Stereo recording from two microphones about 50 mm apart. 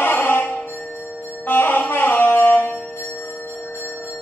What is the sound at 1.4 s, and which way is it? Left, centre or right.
Music, left.